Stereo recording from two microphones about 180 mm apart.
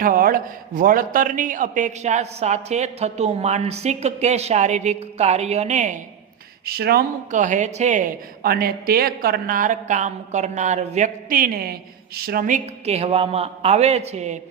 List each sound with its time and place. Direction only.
0.0 s a man's voice: 50° right (ahead or behind)
6.7 s speech: 60° right (ahead or behind)
7.3 s a woman's voice: 45° right (ahead or behind)